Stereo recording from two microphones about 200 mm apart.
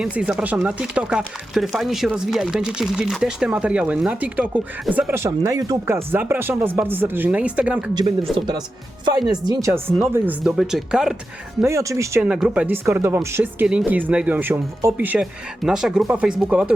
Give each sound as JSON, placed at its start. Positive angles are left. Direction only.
{"t": 0.0, "sound": "speech", "side_deg": -5}
{"t": 7.9, "sound": "speech", "side_deg": -25}
{"t": 11.6, "sound": "speech", "side_deg": -15}